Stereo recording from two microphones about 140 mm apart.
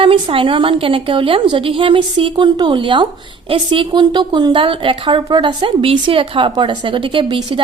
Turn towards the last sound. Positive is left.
turn(degrees=-40)  # may be behind; listen again after turning